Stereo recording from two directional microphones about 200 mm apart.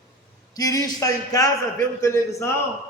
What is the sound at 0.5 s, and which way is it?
A man's voice, 20° left (ahead or behind).